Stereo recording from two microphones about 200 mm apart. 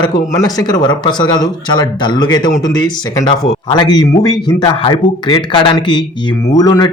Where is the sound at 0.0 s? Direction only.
20° left (ahead or behind).